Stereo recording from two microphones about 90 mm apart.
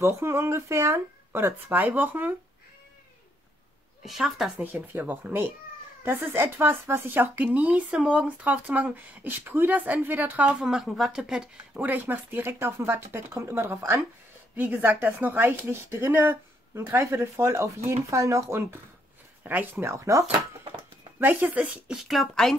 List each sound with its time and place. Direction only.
0.0 s speech: 30° right (ahead or behind)
4.0 s a woman's voice: 5° right (ahead or behind)
4.6 s speech: 20° right (ahead or behind)
11.8 s speech: 20° right (ahead or behind)
21.2 s a woman's voice: 20° right (ahead or behind); by 22.6 s 5° left (ahead or behind)